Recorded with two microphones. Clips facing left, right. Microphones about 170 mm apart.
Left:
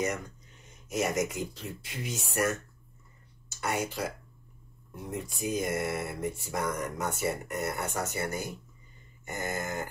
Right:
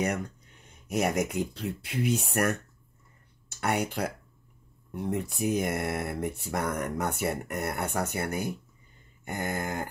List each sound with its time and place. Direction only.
0.7 s speech: 60° right (ahead or behind)